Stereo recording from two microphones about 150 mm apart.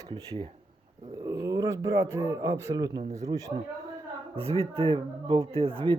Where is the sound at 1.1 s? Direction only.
20° right (ahead or behind).